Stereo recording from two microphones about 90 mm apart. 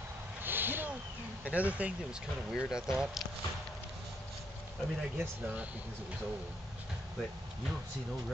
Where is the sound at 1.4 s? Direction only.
15° right (ahead or behind).